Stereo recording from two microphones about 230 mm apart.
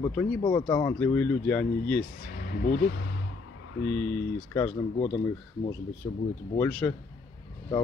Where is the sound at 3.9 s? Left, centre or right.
Centre.